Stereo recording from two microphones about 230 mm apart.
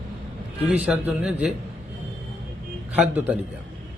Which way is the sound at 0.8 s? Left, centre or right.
Centre.